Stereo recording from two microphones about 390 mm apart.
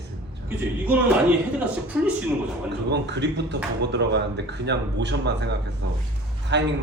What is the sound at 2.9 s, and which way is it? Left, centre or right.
A man's voice, right.